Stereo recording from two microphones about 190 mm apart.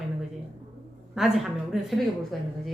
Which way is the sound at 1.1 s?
Centre (ahead or behind).